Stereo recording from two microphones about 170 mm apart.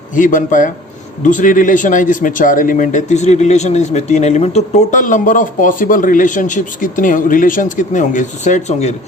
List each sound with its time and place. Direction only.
0.2 s speech: 50° left (ahead or behind)